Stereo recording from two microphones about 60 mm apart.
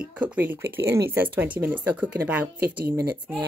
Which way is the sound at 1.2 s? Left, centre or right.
Right.